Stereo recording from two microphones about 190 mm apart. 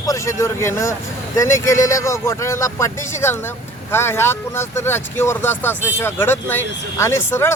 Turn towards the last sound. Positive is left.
turn(degrees=15)  # may be behind; listen again after turning